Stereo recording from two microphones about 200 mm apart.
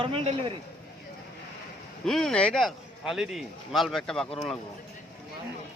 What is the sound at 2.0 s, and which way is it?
A man's voice, centre (ahead or behind).